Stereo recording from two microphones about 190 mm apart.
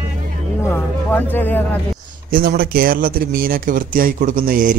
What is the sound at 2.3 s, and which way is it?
Speech, 50° right (ahead or behind).